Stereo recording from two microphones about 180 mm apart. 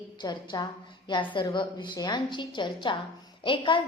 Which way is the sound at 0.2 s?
25° left (ahead or behind).